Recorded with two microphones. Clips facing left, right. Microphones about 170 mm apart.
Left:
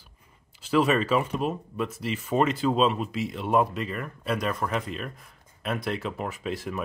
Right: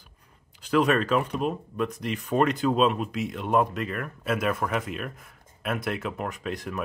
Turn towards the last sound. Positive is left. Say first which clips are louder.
# left 1 dB
turn(degrees=0)  # may be behind; listen again after turning